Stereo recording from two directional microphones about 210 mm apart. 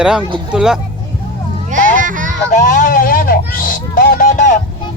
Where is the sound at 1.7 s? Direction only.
40° right (ahead or behind).